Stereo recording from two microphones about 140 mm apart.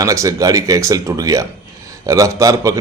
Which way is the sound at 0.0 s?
25° right (ahead or behind).